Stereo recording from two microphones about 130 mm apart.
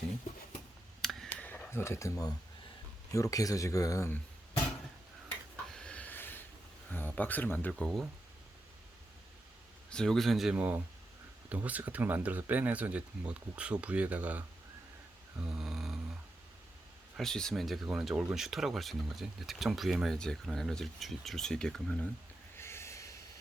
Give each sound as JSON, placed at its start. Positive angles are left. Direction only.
{"t": 1.0, "sound": "a sound", "side_deg": 5}
{"t": 1.5, "sound": "speech", "side_deg": 15}
{"t": 5.7, "sound": "a sound", "side_deg": 10}
{"t": 6.9, "sound": "speech", "side_deg": 15}
{"t": 7.7, "sound": "speech", "side_deg": 5}
{"t": 9.9, "sound": "speech", "side_deg": 5}
{"t": 10.5, "sound": "speech", "side_deg": -15}
{"t": 15.4, "sound": "a sound", "side_deg": -5}
{"t": 17.2, "sound": "speech", "side_deg": 5}
{"t": 22.5, "sound": "snort", "side_deg": 20}